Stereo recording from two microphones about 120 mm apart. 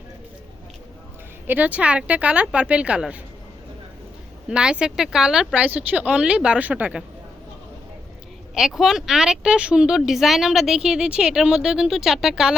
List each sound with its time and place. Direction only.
1.5 s speech: 15° right (ahead or behind)
4.4 s speech: 10° right (ahead or behind)
8.5 s speech: 5° right (ahead or behind)